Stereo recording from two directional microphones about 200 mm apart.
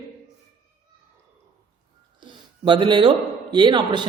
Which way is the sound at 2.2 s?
25° right (ahead or behind).